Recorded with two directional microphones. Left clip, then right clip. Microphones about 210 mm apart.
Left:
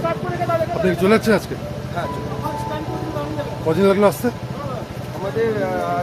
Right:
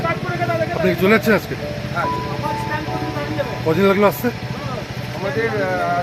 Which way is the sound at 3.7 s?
5° left (ahead or behind).